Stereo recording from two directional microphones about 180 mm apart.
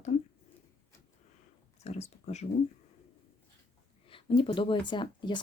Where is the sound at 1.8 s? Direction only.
35° left (ahead or behind).